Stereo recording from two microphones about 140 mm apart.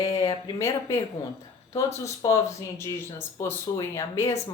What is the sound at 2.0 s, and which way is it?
Speech, 25° left (ahead or behind).